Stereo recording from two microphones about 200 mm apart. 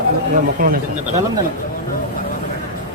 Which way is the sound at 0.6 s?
45° right (ahead or behind).